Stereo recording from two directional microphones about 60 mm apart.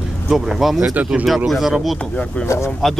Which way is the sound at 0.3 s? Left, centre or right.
Centre.